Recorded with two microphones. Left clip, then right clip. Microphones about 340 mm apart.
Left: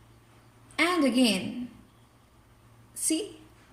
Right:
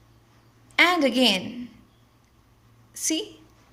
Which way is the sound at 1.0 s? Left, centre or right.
Right.